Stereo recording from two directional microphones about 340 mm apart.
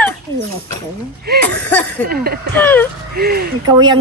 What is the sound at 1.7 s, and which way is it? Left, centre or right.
Speech, centre.